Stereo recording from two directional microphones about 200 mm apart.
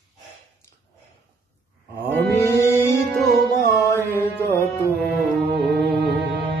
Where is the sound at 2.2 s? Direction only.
15° left (ahead or behind).